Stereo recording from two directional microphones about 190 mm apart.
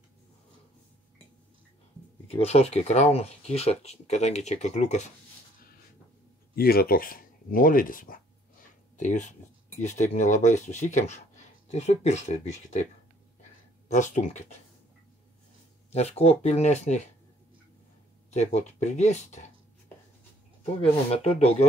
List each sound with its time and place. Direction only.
2.2 s speech: 30° left (ahead or behind)
6.5 s speech: 55° left (ahead or behind); by 12.8 s 40° left (ahead or behind)
13.8 s speech: 40° left (ahead or behind)
15.9 s speech: 35° left (ahead or behind)
18.3 s speech: 35° left (ahead or behind)
20.8 s speech: 30° left (ahead or behind)